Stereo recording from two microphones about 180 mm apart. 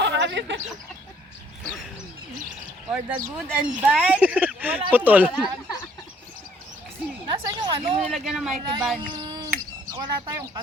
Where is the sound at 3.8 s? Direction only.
10° right (ahead or behind).